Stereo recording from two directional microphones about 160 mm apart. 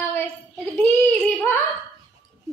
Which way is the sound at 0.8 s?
10° left (ahead or behind).